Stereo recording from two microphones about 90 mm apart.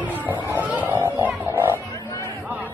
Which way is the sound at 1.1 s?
20° right (ahead or behind).